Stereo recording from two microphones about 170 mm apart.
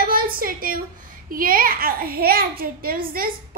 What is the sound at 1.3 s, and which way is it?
A woman's voice, 55° right (ahead or behind).